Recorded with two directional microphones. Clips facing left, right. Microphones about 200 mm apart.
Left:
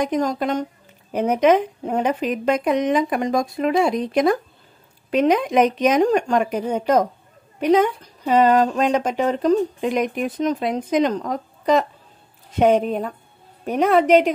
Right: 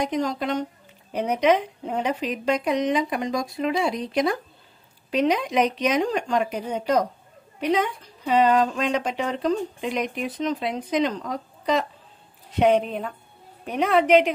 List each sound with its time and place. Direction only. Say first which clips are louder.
0.0 s speech: left 4 dB; 45° left (ahead or behind)